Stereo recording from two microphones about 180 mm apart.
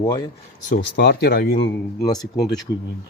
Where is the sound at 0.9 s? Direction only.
65° left (ahead or behind).